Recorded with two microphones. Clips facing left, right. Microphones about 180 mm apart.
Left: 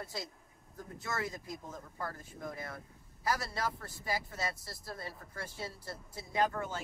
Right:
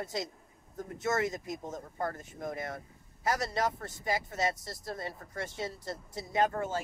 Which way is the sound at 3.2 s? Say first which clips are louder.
Right 4 dB; 20° right (ahead or behind).